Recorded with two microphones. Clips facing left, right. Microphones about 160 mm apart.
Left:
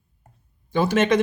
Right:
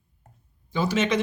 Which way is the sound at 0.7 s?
55° left (ahead or behind).